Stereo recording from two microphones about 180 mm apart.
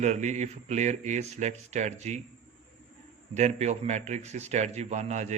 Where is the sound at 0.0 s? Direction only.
40° right (ahead or behind).